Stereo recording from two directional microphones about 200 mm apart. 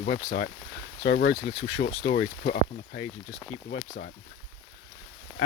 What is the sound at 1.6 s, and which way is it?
Speech, 70° left (ahead or behind).